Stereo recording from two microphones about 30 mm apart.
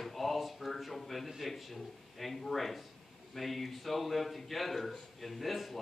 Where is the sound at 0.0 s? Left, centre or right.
Centre.